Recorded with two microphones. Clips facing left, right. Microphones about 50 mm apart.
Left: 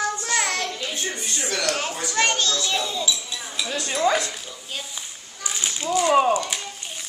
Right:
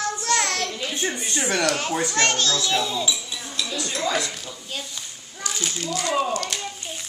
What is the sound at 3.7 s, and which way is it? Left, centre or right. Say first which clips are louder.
Speech: left 5 dB; left.